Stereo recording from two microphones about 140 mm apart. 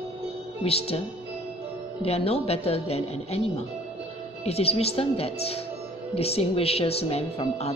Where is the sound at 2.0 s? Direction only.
45° left (ahead or behind).